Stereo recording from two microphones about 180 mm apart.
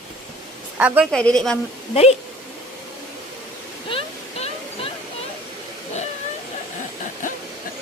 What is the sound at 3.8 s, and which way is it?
Waterfall, 35° left (ahead or behind).